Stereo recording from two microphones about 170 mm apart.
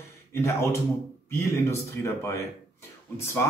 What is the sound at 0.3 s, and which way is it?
Speech, 15° left (ahead or behind).